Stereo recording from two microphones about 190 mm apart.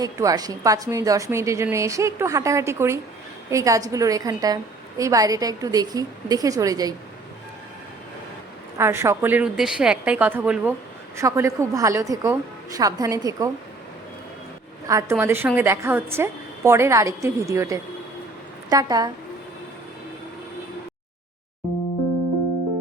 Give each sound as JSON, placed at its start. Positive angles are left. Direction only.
{"t": 0.0, "sound": "a woman's voice", "side_deg": -20}
{"t": 8.8, "sound": "a woman's voice", "side_deg": -15}
{"t": 14.8, "sound": "a woman's voice", "side_deg": -15}